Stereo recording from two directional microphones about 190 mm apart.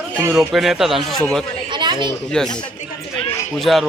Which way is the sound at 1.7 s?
25° right (ahead or behind).